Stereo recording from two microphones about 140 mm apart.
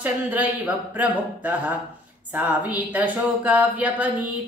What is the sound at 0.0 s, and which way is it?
Speech, 10° right (ahead or behind).